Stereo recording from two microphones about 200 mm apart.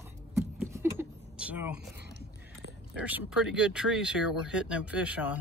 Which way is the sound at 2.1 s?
55° right (ahead or behind).